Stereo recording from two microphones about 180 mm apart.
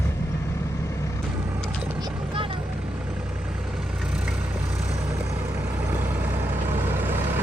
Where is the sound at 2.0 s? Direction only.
30° right (ahead or behind).